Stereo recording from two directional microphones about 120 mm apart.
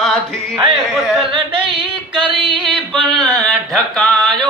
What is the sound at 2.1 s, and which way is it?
Music, 45° right (ahead or behind).